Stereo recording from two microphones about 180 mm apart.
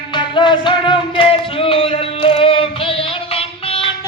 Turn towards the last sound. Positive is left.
turn(degrees=30)  # may be behind; listen again after turning